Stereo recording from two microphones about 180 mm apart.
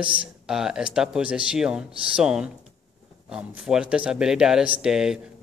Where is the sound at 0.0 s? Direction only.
5° right (ahead or behind).